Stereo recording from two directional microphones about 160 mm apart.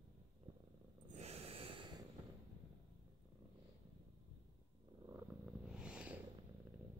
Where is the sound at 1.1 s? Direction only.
40° right (ahead or behind).